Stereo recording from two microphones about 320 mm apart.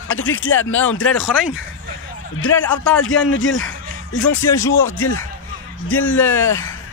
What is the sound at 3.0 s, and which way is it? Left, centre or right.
Speech, left.